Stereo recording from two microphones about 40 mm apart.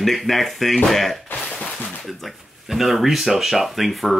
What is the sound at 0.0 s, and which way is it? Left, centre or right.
Speech, centre.